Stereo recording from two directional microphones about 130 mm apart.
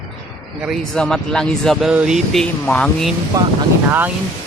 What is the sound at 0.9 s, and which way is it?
Speech, 5° left (ahead or behind).